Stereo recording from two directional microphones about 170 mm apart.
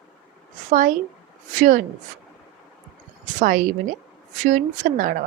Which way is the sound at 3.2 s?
50° right (ahead or behind).